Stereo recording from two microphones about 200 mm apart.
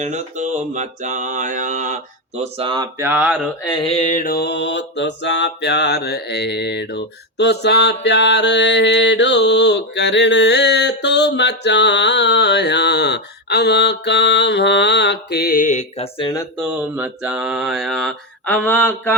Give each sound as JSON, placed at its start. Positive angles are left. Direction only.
{"t": 0.0, "sound": "mantra", "side_deg": -35}
{"t": 2.4, "sound": "speech", "side_deg": -25}
{"t": 3.0, "sound": "speech", "side_deg": -10}
{"t": 3.6, "sound": "mantra", "side_deg": 25}
{"t": 16.6, "sound": "speech", "side_deg": -5}